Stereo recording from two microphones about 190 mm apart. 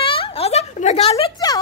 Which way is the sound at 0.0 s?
30° left (ahead or behind).